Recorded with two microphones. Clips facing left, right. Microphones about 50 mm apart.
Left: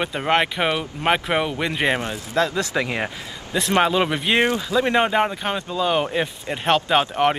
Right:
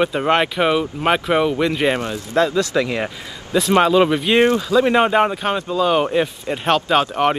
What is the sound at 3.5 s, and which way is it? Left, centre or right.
Speech, centre.